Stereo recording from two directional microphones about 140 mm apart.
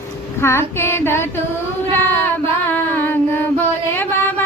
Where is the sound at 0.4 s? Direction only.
15° left (ahead or behind).